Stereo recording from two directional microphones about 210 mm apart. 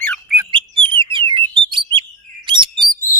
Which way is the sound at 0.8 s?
25° right (ahead or behind).